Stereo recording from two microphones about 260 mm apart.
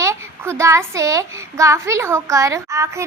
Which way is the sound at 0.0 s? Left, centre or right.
Centre.